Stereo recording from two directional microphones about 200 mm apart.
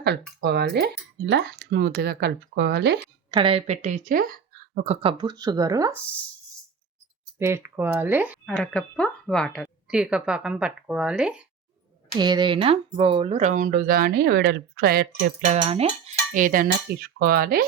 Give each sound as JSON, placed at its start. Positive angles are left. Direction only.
{"t": 0.0, "sound": "speech", "side_deg": -55}
{"t": 3.3, "sound": "speech", "side_deg": -30}
{"t": 4.9, "sound": "speech", "side_deg": -25}
{"t": 7.3, "sound": "speech", "side_deg": -10}
{"t": 8.4, "sound": "speech", "side_deg": 5}
{"t": 12.1, "sound": "speech", "side_deg": -20}
{"t": 15.4, "sound": "speech", "side_deg": -35}